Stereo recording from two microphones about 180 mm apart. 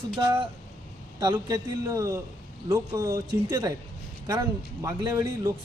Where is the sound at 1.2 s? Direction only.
20° right (ahead or behind).